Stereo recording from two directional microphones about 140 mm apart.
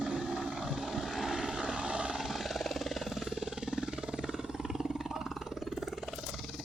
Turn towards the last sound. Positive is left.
turn(degrees=-5)  # may be behind; listen again after turning